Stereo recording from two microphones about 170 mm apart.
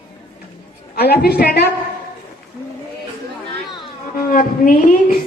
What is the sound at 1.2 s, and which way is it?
Speech, 65° left (ahead or behind).